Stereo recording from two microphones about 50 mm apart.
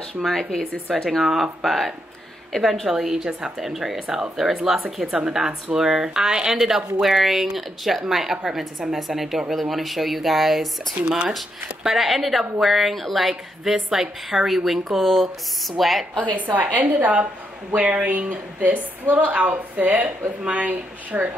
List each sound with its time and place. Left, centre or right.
0.2 s speech: centre
1.2 s a woman's voice: centre
2.9 s a woman's voice: centre
11.1 s a woman's voice: centre
16.2 s speech: right